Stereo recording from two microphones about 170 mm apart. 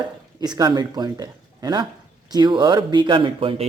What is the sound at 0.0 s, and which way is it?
A man's voice, 25° right (ahead or behind).